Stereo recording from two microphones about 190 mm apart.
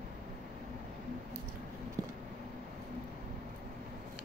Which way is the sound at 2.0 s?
20° right (ahead or behind).